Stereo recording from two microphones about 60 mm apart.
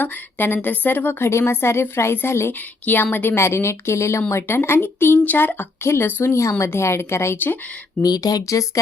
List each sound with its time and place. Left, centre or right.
0.0 s a woman's voice: left
2.6 s a woman's voice: left
3.3 s a woman's voice: left
5.8 s speech: left
7.3 s a woman's voice: left
8.0 s speech: left